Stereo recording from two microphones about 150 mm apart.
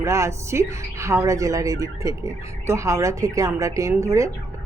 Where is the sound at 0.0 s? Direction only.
20° right (ahead or behind).